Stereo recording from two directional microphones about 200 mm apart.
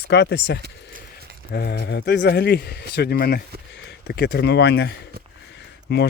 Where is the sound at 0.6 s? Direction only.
50° right (ahead or behind).